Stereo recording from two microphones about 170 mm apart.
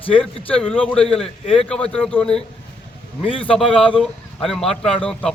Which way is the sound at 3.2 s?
30° left (ahead or behind).